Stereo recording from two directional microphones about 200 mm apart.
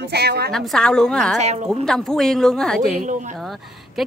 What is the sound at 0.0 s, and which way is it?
Speech, 55° right (ahead or behind).